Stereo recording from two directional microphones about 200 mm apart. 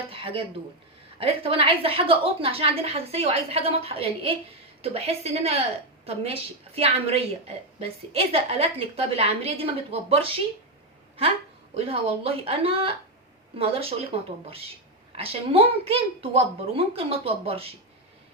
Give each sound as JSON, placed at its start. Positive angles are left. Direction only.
{"t": 0.1, "sound": "a sound", "side_deg": -25}
{"t": 1.2, "sound": "a woman's voice", "side_deg": -30}
{"t": 11.7, "sound": "a woman's voice", "side_deg": -30}